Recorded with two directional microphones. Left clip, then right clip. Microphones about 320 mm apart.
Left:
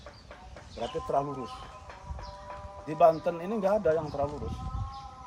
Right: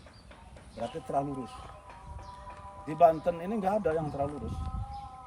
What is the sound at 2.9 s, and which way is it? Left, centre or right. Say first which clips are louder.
Speech: left 1 dB; centre.